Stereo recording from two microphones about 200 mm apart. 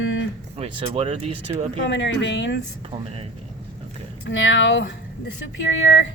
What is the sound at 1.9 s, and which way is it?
Speech, 65° left (ahead or behind).